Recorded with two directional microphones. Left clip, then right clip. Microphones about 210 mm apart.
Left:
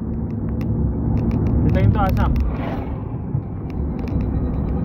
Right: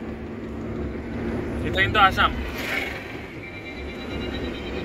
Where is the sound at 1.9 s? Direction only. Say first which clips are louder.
Right 5 dB; 25° right (ahead or behind).